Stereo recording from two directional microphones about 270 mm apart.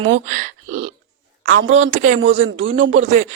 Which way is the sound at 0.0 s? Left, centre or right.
Right.